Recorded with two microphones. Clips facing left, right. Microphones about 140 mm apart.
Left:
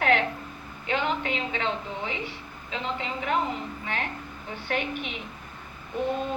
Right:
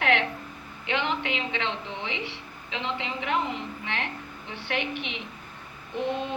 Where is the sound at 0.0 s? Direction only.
40° left (ahead or behind).